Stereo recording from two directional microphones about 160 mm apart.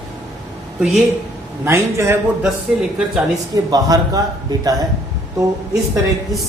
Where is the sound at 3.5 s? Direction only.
25° right (ahead or behind).